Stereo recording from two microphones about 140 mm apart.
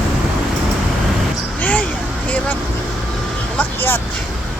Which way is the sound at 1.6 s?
10° left (ahead or behind).